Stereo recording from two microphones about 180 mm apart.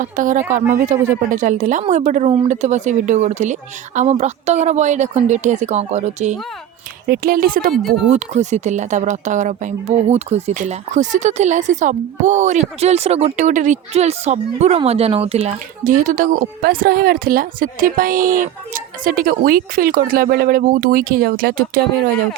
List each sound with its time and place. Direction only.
0.0 s speech: 45° right (ahead or behind)
7.1 s speech: 50° right (ahead or behind)
7.7 s speech: centre (ahead or behind)
8.1 s speech: 40° right (ahead or behind)